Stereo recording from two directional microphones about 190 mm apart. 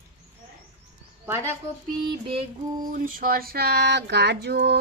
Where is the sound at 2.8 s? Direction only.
45° right (ahead or behind).